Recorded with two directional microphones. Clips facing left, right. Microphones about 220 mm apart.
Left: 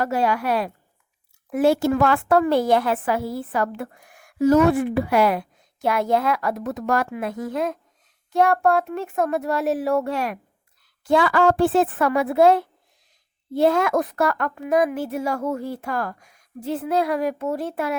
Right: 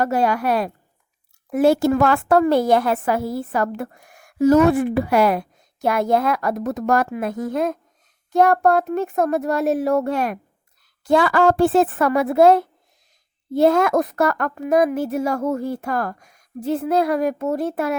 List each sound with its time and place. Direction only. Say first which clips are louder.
0.0 s a woman's voice: right 3 dB; 45° right (ahead or behind)